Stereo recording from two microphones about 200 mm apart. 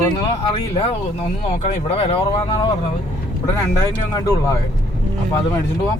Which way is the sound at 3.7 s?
15° left (ahead or behind).